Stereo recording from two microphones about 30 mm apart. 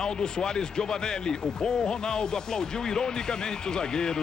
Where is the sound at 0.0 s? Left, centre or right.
Left.